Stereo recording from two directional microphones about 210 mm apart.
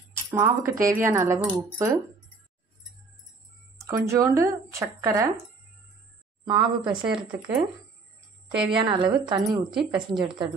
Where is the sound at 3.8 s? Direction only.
15° right (ahead or behind).